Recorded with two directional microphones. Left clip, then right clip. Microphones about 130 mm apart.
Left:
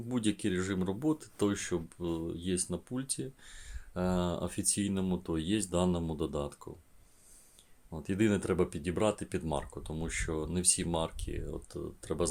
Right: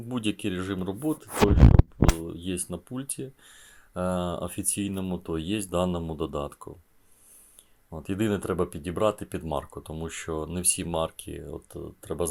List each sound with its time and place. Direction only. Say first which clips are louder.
0.1 s speech: right 3 dB; 20° right (ahead or behind)
2.1 s speech: right 2 dB; 15° right (ahead or behind)
7.9 s speech: right 2 dB; 20° right (ahead or behind)